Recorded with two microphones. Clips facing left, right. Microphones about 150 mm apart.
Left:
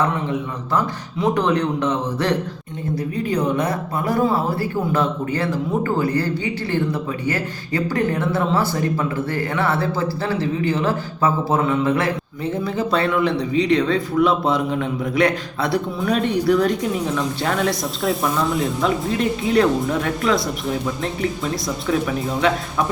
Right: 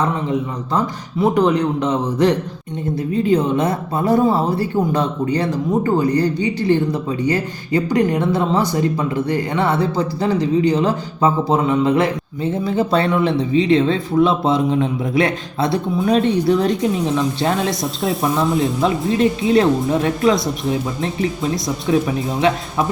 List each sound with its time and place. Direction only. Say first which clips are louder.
1.2 s speech: right 3 dB; 10° right (ahead or behind)
2.9 s speech: right 6 dB; 25° right (ahead or behind)
18.2 s speech: right 6 dB; 25° right (ahead or behind)
21.8 s speech: right 3 dB; 25° right (ahead or behind)